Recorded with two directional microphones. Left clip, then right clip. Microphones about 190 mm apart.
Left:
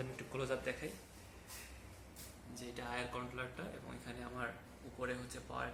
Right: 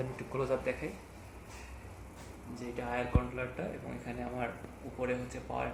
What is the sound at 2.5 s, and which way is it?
Speech, 5° right (ahead or behind).